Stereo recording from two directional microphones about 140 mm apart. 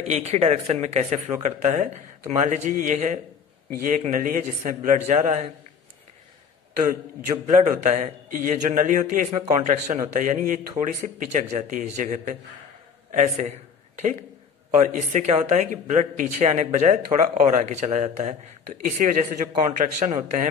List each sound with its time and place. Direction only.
0.0 s a man's voice: 50° right (ahead or behind)
7.2 s a man's voice: 60° right (ahead or behind)
9.3 s speech: 50° right (ahead or behind)
10.1 s a man's voice: 65° right (ahead or behind)
11.5 s a man's voice: 60° right (ahead or behind)
14.7 s a man's voice: 60° right (ahead or behind)
18.9 s a man's voice: 75° right (ahead or behind)
19.6 s a man's voice: 65° right (ahead or behind)